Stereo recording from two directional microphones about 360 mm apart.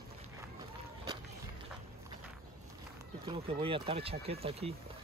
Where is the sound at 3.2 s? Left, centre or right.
Centre.